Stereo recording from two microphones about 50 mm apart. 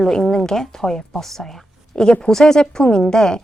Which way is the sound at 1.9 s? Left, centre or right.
Centre.